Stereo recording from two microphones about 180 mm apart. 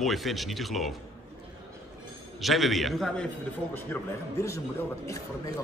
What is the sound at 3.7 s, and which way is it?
Speech, 15° left (ahead or behind).